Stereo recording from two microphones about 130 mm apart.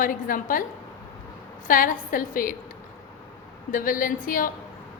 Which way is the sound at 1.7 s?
90° left.